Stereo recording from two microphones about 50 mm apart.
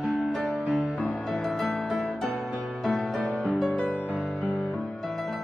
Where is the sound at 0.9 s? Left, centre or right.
Left.